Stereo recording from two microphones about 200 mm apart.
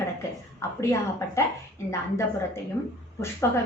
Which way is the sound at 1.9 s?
15° left (ahead or behind).